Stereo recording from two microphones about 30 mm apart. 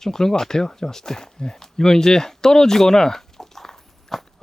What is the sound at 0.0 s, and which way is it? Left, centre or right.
Speech, centre.